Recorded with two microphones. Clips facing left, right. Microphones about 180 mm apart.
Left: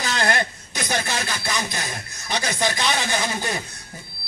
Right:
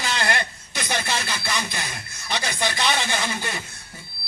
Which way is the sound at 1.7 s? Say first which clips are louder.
Left 2 dB; 40° left (ahead or behind).